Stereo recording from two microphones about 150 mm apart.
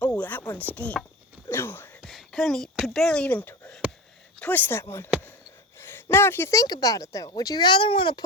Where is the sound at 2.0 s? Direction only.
Centre (ahead or behind).